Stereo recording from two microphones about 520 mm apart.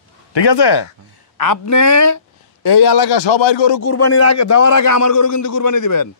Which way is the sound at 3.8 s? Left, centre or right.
Left.